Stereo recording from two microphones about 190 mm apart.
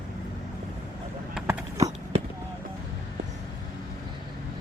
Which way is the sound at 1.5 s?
15° right (ahead or behind).